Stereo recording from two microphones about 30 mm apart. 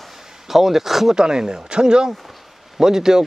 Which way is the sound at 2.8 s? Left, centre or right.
Centre.